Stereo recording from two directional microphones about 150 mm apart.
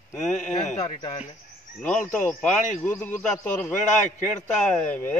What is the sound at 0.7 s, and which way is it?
Speech, 30° left (ahead or behind).